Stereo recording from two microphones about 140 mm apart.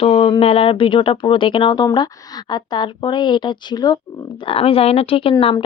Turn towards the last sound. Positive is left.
turn(degrees=40)  # may be behind; listen again after turning